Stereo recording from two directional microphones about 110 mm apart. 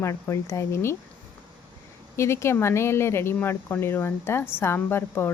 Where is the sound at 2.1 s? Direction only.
25° left (ahead or behind).